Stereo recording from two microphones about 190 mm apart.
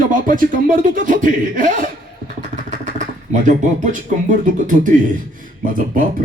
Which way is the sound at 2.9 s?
40° right (ahead or behind).